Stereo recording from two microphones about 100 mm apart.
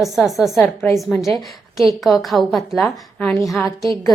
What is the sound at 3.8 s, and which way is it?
Speech, 30° left (ahead or behind).